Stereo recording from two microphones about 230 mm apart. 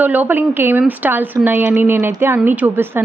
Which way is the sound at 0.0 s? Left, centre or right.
Centre.